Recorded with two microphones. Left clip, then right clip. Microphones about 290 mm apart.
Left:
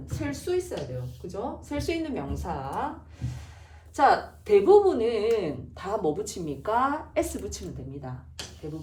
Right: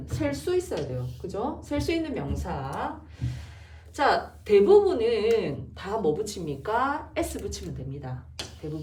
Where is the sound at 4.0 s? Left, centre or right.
Centre.